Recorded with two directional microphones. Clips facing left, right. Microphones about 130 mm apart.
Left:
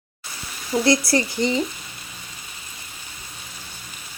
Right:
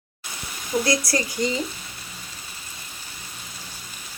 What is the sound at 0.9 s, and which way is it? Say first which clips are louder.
Speech: left 8 dB; 25° left (ahead or behind).